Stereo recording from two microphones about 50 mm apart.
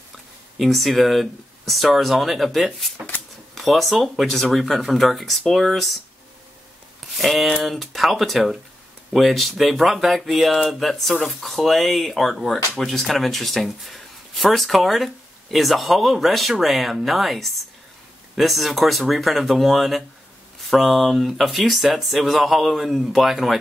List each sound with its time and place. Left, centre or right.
0.6 s speech: centre
7.2 s speech: centre